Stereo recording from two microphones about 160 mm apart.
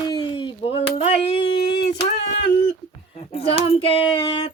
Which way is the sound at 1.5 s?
90° left.